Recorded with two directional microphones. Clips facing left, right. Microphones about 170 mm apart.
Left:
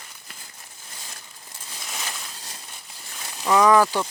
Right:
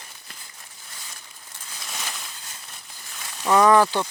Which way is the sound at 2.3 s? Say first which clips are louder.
Left 2 dB; 35° left (ahead or behind).